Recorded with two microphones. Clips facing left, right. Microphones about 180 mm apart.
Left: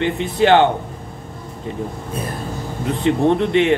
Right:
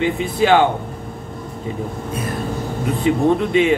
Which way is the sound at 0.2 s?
65° left (ahead or behind).